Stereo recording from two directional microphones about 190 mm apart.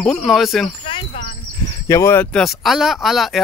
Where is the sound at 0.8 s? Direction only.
30° left (ahead or behind).